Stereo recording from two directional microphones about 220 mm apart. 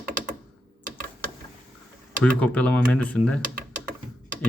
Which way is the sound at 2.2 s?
5° left (ahead or behind).